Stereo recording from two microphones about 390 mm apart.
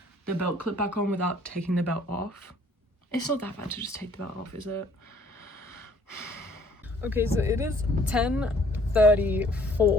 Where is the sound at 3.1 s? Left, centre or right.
Centre.